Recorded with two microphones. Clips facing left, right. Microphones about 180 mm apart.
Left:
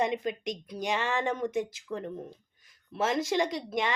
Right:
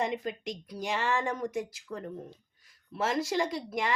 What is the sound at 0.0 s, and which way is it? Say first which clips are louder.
Speech: left 3 dB; 20° left (ahead or behind).